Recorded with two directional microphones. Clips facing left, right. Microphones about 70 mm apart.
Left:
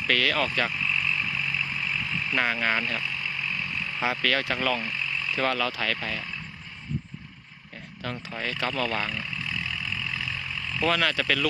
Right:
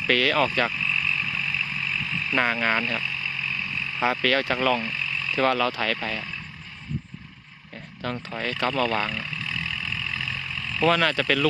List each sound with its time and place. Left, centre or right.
0.1 s speech: centre
0.8 s a sound: left
2.3 s speech: centre
3.0 s a sound: left
4.0 s speech: centre
4.8 s vehicle: centre
5.5 s speech: centre
8.3 s speech: centre
10.0 s vehicle: centre
10.8 s speech: centre